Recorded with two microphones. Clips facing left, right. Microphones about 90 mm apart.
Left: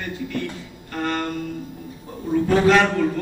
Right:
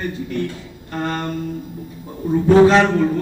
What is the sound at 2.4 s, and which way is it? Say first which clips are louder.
Speech: right 5 dB; 25° right (ahead or behind).